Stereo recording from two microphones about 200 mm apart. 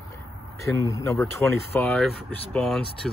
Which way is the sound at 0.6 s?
15° left (ahead or behind).